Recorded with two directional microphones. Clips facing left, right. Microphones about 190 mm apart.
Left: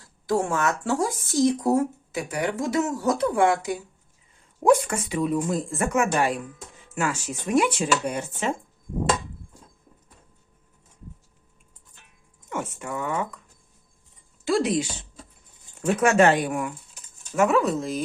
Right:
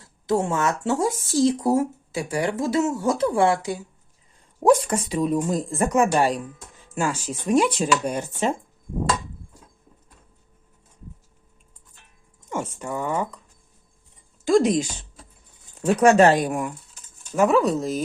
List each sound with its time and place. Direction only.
0.0 s speech: 25° right (ahead or behind)
4.9 s speech: 35° right (ahead or behind)
12.5 s speech: 30° right (ahead or behind)
14.4 s speech: 45° right (ahead or behind)
16.0 s speech: 35° right (ahead or behind)